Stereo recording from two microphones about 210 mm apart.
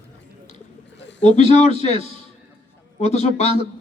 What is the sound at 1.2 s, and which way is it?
Speech, 30° left (ahead or behind).